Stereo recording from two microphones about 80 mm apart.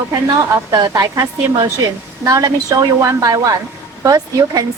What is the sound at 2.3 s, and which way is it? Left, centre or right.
A woman's voice, right.